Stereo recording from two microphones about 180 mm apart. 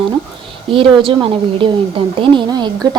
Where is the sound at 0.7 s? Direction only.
30° right (ahead or behind).